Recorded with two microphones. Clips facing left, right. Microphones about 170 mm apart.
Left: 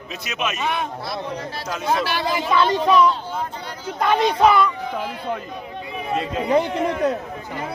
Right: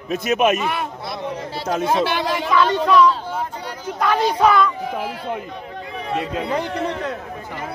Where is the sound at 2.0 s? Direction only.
20° right (ahead or behind).